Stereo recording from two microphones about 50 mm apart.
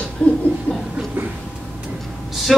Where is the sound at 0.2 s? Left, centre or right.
Left.